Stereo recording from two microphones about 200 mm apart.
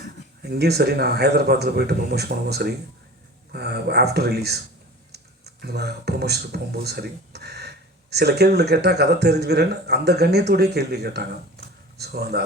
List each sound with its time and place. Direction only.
0.4 s a man's voice: 55° right (ahead or behind)